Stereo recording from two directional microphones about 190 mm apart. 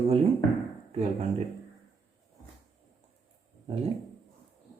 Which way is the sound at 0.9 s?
35° right (ahead or behind).